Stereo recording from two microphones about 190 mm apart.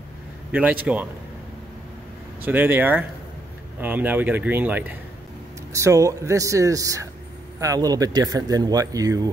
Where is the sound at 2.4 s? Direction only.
10° right (ahead or behind).